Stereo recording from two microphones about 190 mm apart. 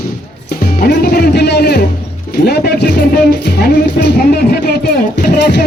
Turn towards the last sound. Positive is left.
turn(degrees=55)  # may be behind; listen again after turning